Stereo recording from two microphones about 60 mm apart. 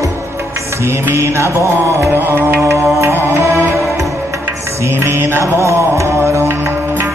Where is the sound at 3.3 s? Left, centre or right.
Right.